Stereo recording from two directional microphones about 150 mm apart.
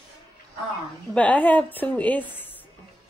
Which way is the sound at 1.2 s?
10° left (ahead or behind).